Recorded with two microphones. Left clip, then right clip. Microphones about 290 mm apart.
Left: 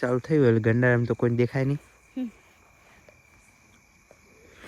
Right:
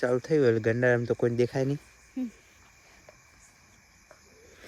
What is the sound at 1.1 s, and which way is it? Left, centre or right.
Speech, left.